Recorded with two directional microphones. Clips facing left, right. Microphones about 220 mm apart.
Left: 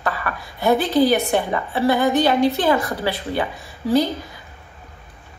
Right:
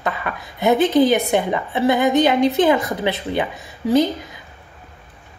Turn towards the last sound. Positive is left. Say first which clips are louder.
# right 2 dB
turn(degrees=-20)  # may be behind; listen again after turning